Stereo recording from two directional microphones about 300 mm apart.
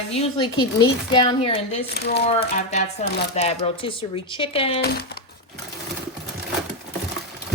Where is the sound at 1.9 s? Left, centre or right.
Left.